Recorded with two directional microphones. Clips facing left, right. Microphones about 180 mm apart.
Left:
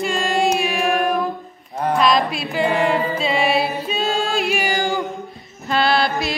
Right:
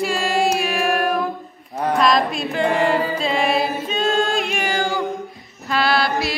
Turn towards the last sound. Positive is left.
turn(degrees=20)  # may be behind; listen again after turning